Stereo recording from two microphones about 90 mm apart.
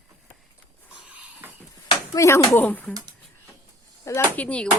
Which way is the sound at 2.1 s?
35° left (ahead or behind).